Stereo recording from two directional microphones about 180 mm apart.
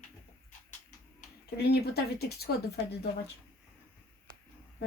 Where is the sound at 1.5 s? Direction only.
65° left (ahead or behind).